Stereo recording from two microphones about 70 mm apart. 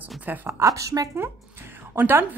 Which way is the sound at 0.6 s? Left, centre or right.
Right.